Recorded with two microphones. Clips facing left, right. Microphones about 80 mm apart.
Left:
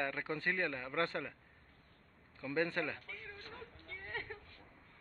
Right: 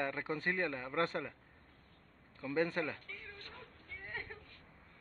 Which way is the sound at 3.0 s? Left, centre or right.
Centre.